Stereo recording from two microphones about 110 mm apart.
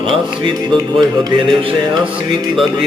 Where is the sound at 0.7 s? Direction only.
45° right (ahead or behind).